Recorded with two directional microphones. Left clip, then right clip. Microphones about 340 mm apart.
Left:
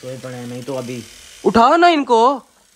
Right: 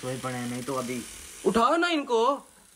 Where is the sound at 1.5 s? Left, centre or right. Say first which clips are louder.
Left 12 dB; centre.